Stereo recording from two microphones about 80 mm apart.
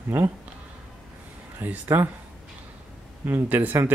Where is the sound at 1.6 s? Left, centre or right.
Right.